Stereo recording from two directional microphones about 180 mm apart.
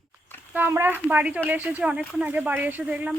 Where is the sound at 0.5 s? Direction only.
10° right (ahead or behind).